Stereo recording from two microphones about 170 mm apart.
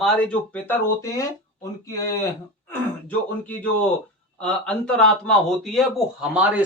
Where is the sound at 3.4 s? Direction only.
10° left (ahead or behind).